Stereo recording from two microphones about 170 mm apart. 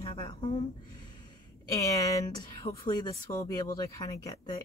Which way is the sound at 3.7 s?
20° left (ahead or behind).